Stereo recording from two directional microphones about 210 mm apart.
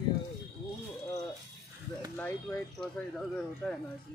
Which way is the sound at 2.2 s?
5° left (ahead or behind).